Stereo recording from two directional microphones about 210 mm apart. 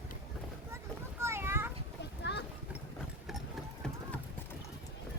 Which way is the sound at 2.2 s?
55° left (ahead or behind).